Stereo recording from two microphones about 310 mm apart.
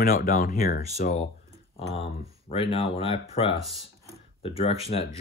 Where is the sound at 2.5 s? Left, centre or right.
Centre.